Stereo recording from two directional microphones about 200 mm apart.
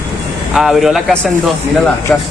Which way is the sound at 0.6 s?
Centre (ahead or behind).